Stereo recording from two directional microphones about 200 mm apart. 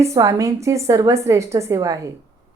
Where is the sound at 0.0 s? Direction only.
15° right (ahead or behind).